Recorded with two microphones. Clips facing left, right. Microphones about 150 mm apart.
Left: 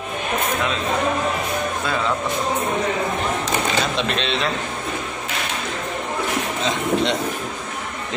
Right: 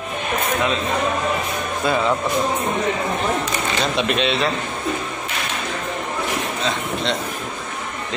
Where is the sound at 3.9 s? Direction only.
10° right (ahead or behind).